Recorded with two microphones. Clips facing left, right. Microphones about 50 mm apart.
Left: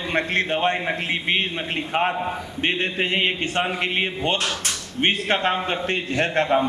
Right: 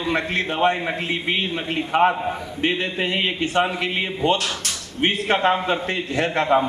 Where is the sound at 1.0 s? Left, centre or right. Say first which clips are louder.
Even; left.